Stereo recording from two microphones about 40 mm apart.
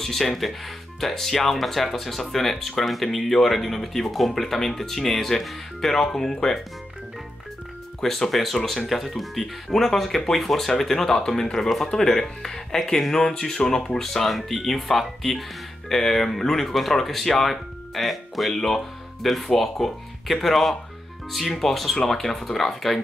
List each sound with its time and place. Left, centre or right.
0.0 s speech: centre
8.0 s speech: centre